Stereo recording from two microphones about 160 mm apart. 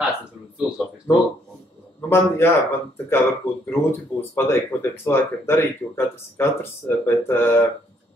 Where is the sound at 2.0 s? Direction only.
15° left (ahead or behind).